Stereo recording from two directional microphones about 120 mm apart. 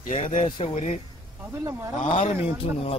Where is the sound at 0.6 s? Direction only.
60° left (ahead or behind).